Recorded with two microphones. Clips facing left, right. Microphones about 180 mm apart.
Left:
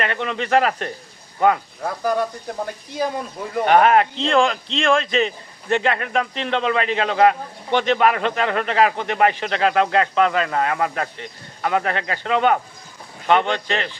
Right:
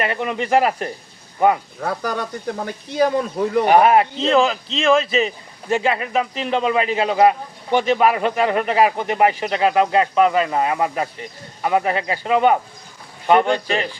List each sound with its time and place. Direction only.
0.0 s speech: 10° right (ahead or behind)
1.8 s speech: 75° right (ahead or behind)
3.7 s speech: 10° right (ahead or behind)